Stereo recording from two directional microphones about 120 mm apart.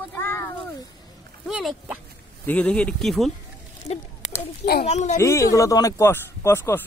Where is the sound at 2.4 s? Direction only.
10° left (ahead or behind).